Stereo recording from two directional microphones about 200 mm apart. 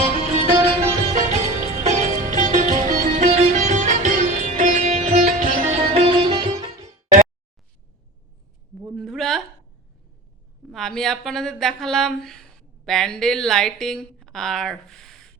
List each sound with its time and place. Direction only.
0.4 s music: 30° right (ahead or behind)
9.0 s a sound: centre (ahead or behind)
10.7 s a woman's voice: centre (ahead or behind)